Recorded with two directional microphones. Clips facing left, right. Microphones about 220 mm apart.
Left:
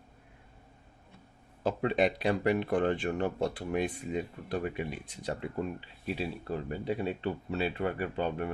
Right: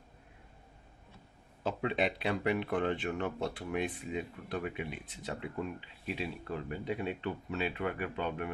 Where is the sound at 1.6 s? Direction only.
40° left (ahead or behind).